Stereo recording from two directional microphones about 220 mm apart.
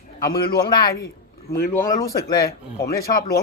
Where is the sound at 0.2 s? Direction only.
45° left (ahead or behind).